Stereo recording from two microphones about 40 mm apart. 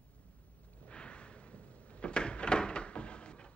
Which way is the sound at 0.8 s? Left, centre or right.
Left.